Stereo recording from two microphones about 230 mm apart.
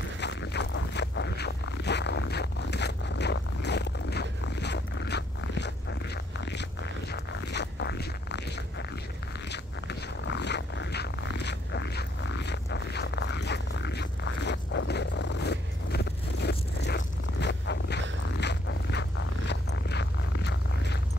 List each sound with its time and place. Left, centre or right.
0.2 s zipper: left
7.1 s zipper: left
9.5 s zipper: left